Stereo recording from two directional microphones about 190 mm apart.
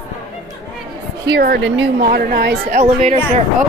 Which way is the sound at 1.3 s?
55° right (ahead or behind).